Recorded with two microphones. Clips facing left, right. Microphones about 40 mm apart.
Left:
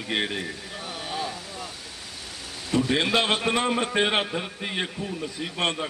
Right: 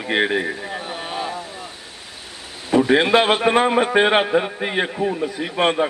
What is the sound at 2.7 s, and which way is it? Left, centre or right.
A man's voice, centre.